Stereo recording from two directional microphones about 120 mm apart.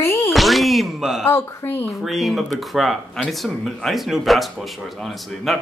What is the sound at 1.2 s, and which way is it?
Speech, 20° left (ahead or behind).